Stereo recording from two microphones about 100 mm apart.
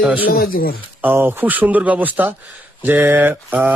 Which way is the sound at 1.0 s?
20° right (ahead or behind).